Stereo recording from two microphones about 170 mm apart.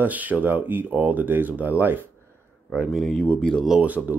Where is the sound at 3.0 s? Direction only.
5° left (ahead or behind).